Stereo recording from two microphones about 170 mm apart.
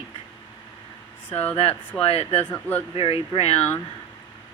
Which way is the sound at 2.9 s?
35° left (ahead or behind).